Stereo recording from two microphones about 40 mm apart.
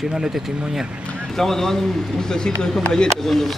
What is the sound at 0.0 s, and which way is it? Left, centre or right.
Speech, centre.